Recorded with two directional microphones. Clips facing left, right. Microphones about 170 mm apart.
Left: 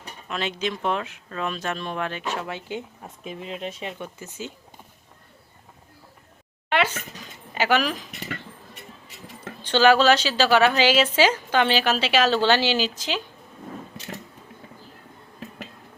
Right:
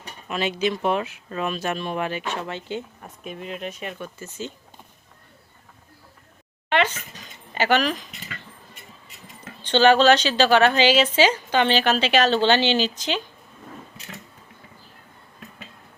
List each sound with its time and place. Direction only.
0.3 s speech: 5° right (ahead or behind); by 3.1 s 10° left (ahead or behind)
3.2 s speech: 25° left (ahead or behind)
3.9 s speech: 15° left (ahead or behind)
6.7 s a sound: 5° left (ahead or behind)
7.5 s speech: 5° left (ahead or behind)
9.6 s a woman's voice: 5° left (ahead or behind)